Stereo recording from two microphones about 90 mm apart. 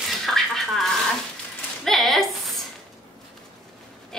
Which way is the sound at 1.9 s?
Centre (ahead or behind).